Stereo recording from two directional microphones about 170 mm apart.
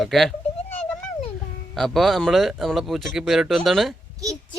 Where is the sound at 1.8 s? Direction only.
Centre (ahead or behind).